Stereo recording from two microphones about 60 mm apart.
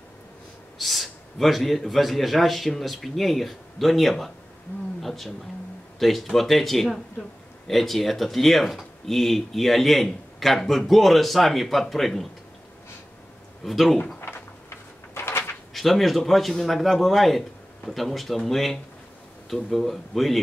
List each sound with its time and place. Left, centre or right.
0.7 s speech: centre
13.7 s speech: centre
14.2 s a sound: left
15.7 s speech: centre